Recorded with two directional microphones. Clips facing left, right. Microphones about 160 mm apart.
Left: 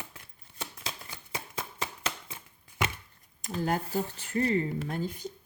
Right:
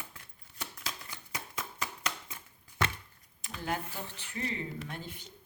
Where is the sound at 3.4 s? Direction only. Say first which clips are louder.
Left 6 dB; 40° left (ahead or behind).